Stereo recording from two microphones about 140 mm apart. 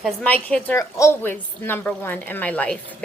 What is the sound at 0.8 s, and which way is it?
A woman's voice, 20° left (ahead or behind).